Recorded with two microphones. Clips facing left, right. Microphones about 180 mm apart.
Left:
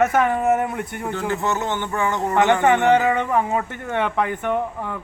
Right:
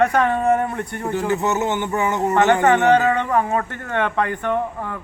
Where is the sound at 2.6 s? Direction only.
15° left (ahead or behind).